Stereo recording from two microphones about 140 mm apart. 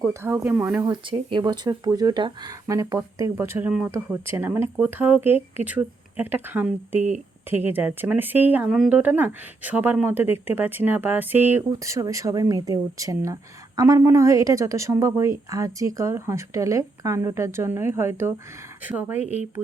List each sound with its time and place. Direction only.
0.0 s speech: 20° right (ahead or behind)
1.1 s speech: 35° right (ahead or behind); by 19.4 s 15° right (ahead or behind)